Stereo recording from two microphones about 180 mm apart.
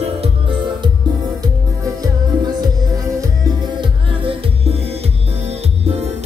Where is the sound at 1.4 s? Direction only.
20° right (ahead or behind).